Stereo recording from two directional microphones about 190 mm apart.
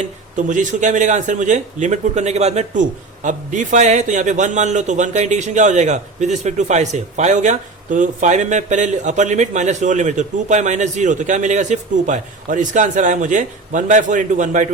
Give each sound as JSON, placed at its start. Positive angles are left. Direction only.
{"t": 0.0, "sound": "speech", "side_deg": -40}